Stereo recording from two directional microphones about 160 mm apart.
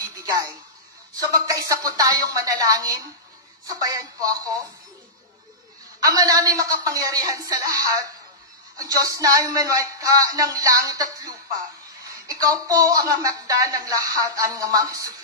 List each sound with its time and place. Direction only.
0.0 s a sound: 20° right (ahead or behind)
1.2 s speech: 20° right (ahead or behind)
5.9 s speech: 20° right (ahead or behind)